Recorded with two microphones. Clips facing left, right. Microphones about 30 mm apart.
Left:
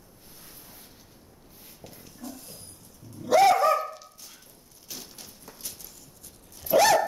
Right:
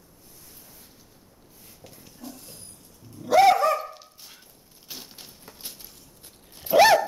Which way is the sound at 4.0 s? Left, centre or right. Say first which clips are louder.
Even; right.